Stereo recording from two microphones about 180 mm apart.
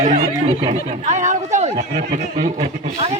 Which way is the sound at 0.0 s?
40° right (ahead or behind).